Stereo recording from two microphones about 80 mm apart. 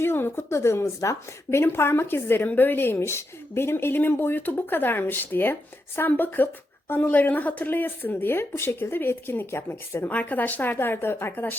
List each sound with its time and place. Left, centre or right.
0.0 s a woman's voice: left